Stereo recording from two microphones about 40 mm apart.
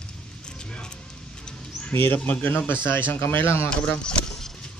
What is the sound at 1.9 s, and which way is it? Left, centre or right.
Speech, left.